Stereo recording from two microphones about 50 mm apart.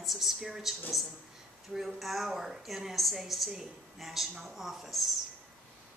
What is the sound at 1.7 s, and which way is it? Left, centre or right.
A woman's voice, centre.